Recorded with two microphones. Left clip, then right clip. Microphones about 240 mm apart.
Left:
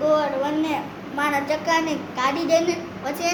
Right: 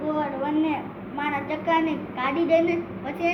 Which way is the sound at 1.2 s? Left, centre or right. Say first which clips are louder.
Left 5 dB; left.